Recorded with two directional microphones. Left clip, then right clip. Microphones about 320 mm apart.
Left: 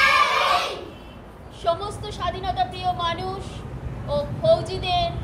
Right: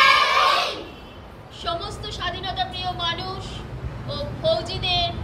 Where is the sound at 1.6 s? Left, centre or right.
Centre.